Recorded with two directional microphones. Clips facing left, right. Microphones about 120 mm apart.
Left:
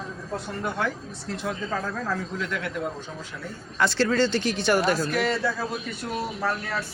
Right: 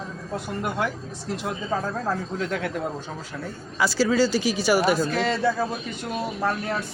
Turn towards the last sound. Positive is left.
turn(degrees=-20)  # may be behind; listen again after turning